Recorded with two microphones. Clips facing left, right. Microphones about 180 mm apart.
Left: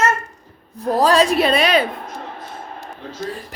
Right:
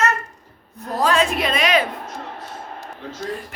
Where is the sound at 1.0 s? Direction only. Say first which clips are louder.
Left 4 dB; 35° left (ahead or behind).